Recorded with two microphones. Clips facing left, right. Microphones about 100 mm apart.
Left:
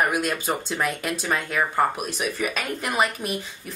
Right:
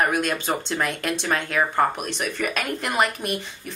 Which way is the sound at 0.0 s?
5° left (ahead or behind).